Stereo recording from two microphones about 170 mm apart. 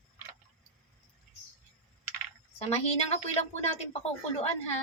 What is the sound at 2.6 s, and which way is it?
Speech, 40° left (ahead or behind).